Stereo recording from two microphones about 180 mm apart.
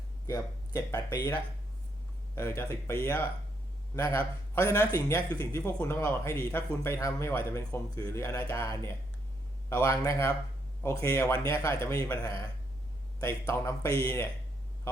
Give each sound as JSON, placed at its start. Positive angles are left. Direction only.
{"t": 0.3, "sound": "a man's voice", "side_deg": 15}
{"t": 2.3, "sound": "a man's voice", "side_deg": 15}